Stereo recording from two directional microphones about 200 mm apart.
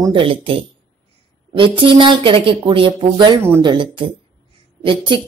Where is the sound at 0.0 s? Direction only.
25° right (ahead or behind).